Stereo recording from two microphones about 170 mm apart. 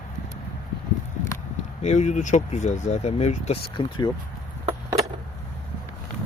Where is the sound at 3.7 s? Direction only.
30° left (ahead or behind).